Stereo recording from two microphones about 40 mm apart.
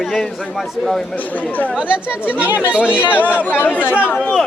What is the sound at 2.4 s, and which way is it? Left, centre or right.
Speech, right.